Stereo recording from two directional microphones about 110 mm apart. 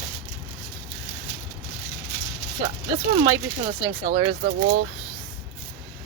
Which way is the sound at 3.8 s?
35° right (ahead or behind).